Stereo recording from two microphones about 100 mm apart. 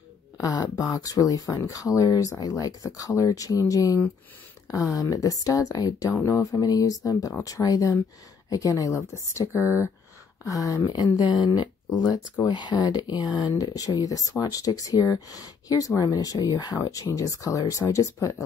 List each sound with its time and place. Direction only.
0.4 s speech: 40° left (ahead or behind)
9.6 s speech: 20° right (ahead or behind)
10.4 s speech: 35° left (ahead or behind)